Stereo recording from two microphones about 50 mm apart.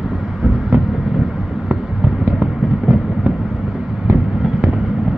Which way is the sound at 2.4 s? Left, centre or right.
Centre.